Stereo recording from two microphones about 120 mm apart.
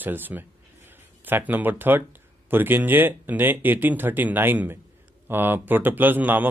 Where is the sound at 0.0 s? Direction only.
15° right (ahead or behind).